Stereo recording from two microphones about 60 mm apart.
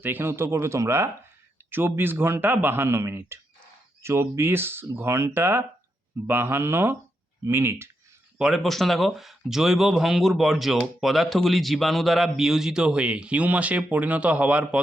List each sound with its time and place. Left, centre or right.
0.0 s a man's voice: right
8.4 s speech: centre
8.6 s speech: centre; by 14.8 s right